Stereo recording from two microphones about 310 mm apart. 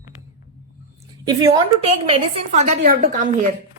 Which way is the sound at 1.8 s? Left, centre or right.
Centre.